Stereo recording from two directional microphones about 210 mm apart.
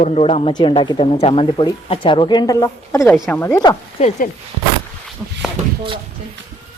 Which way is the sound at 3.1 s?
Centre (ahead or behind).